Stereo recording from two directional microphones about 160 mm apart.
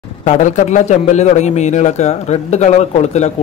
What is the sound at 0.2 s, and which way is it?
A man's voice, 50° left (ahead or behind).